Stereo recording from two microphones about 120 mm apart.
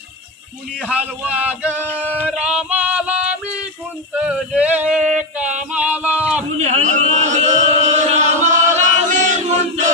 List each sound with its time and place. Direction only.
0.8 s male singing: 10° right (ahead or behind)
6.6 s chant: 75° right (ahead or behind)
8.5 s choir: 90° right